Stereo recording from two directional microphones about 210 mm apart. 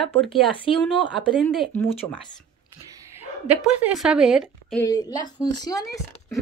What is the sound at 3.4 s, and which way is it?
Speech, 5° right (ahead or behind).